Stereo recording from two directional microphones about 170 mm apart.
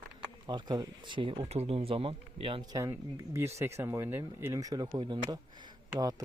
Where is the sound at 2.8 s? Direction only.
20° right (ahead or behind).